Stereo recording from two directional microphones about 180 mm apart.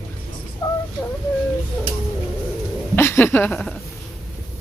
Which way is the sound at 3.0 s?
15° left (ahead or behind).